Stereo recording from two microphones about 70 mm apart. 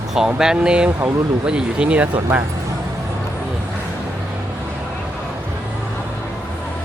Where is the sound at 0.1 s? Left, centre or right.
Centre.